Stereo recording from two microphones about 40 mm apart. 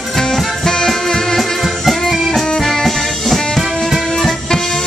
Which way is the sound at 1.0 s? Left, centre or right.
Centre.